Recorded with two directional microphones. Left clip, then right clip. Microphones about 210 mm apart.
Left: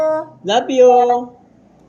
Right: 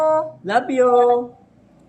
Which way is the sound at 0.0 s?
10° right (ahead or behind).